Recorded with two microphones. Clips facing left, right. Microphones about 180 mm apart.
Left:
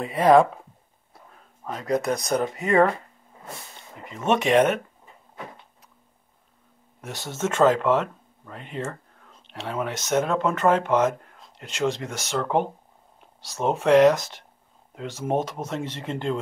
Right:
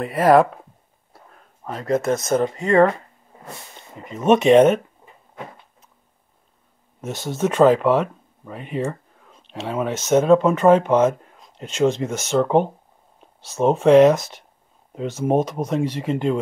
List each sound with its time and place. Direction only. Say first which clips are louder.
0.0 s speech: right 2 dB; centre (ahead or behind)
1.6 s speech: right 3 dB; centre (ahead or behind)
4.0 s speech: right 7 dB; 20° right (ahead or behind)
7.0 s speech: right 6 dB; 20° right (ahead or behind)
13.8 s speech: right 4 dB; 20° right (ahead or behind)